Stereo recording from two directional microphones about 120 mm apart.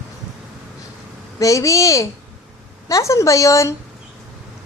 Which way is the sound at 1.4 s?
25° left (ahead or behind).